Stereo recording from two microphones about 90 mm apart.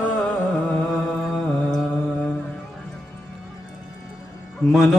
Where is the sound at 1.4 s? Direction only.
15° left (ahead or behind).